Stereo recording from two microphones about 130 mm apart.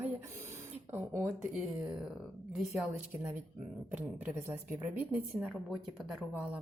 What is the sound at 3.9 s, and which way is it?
A woman's voice, 15° right (ahead or behind).